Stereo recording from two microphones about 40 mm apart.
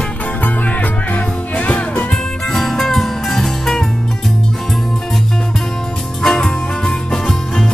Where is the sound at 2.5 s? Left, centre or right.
Centre.